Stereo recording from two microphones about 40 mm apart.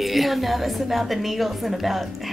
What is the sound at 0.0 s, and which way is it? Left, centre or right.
Speech, centre.